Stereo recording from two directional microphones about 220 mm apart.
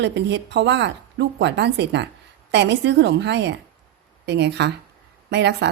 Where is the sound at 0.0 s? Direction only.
55° right (ahead or behind).